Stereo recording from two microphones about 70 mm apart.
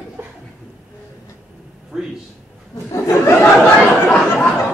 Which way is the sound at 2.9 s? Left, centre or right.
Left.